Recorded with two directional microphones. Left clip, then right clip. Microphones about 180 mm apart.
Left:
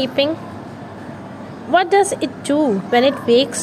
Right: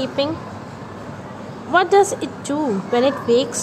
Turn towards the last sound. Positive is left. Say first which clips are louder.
# left 3 dB
turn(degrees=5)  # may be behind; listen again after turning